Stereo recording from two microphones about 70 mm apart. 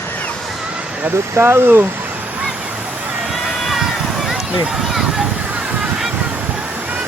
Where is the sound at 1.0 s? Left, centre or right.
Right.